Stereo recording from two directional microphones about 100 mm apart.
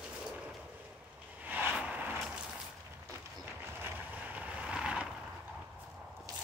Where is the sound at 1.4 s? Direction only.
15° right (ahead or behind).